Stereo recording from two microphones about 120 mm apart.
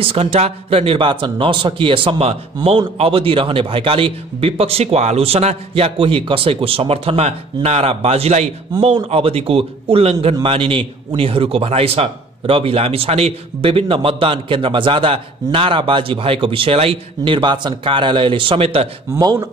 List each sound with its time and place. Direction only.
0.0 s speech: 55° right (ahead or behind)
19.1 s speech: 30° right (ahead or behind)